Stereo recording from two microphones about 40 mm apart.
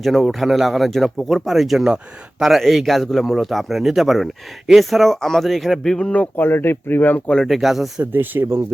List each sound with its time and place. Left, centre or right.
0.0 s speech: centre
5.8 s speech: centre
6.3 s speech: left
7.4 s speech: centre
8.1 s speech: right